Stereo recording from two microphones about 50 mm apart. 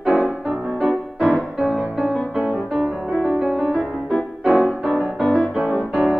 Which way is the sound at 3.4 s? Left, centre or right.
Right.